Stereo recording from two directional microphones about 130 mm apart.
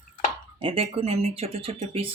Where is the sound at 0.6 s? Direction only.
45° right (ahead or behind).